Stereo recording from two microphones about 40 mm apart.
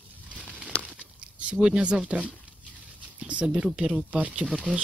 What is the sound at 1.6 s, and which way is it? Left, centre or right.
Speech, right.